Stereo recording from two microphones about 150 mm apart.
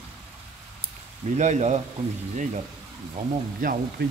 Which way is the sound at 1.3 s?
50° right (ahead or behind).